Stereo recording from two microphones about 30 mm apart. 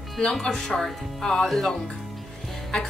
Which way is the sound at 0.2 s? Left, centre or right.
Left.